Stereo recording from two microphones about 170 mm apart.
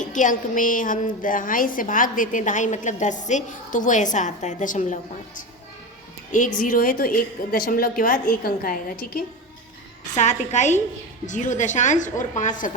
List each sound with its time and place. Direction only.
0.0 s a woman's voice: 50° left (ahead or behind)
6.7 s a woman's voice: 60° left (ahead or behind)
10.2 s a woman's voice: 45° left (ahead or behind)